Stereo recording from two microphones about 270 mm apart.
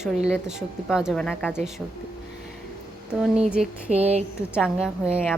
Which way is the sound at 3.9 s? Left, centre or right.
Right.